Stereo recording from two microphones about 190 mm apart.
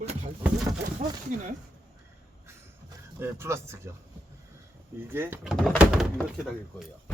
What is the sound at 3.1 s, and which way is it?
Speech, 10° right (ahead or behind).